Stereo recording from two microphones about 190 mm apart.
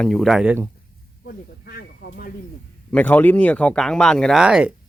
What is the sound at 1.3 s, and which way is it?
Snake, 55° left (ahead or behind).